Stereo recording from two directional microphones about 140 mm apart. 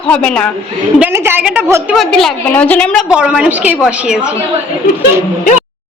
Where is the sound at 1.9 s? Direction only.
Centre (ahead or behind).